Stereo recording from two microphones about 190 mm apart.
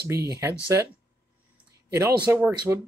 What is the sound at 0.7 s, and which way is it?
Speech, 15° right (ahead or behind).